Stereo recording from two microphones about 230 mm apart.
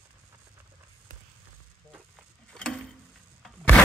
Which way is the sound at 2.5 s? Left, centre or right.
Centre.